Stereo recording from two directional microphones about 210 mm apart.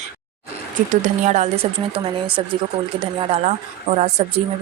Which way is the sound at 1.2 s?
35° right (ahead or behind).